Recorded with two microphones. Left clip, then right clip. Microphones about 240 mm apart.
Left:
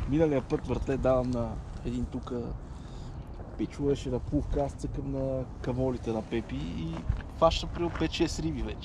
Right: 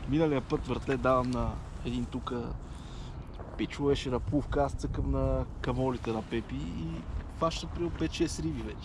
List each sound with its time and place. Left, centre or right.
0.1 s speech: centre
2.2 s speech: right
3.5 s speech: right
6.0 s speech: centre